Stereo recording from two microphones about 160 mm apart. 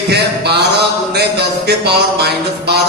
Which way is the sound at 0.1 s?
90° right.